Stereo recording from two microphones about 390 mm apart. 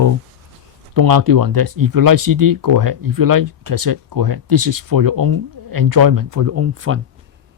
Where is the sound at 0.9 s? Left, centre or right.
Right.